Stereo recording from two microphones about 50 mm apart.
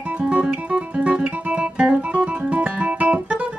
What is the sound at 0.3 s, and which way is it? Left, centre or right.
Guitar, right.